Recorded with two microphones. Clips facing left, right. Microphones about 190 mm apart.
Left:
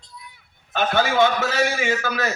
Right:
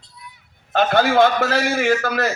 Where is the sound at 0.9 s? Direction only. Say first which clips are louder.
Right 3 dB; 60° right (ahead or behind).